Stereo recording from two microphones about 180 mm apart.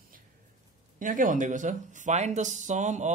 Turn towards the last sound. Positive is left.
turn(degrees=-40)  # may be behind; listen again after turning